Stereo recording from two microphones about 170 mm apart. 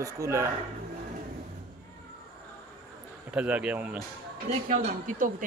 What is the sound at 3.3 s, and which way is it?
Speech, 5° right (ahead or behind).